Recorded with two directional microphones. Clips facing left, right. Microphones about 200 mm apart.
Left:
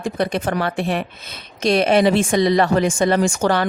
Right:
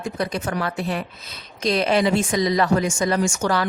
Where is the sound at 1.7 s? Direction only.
60° left (ahead or behind).